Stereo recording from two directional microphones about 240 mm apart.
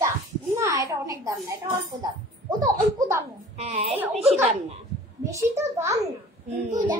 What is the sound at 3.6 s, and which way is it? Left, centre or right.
Speech, right.